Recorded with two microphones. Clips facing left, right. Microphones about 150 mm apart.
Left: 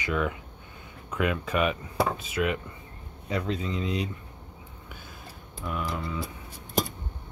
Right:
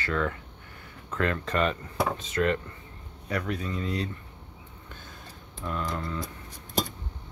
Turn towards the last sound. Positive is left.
turn(degrees=10)  # may be behind; listen again after turning